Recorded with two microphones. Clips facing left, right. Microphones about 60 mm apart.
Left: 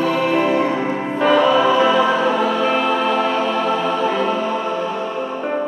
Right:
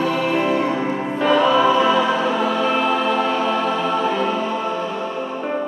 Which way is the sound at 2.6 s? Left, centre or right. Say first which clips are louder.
Left 1 dB; left.